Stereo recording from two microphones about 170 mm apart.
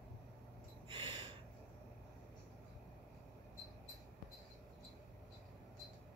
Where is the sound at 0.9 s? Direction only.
30° right (ahead or behind).